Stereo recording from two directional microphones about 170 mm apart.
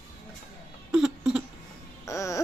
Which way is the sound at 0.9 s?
5° right (ahead or behind).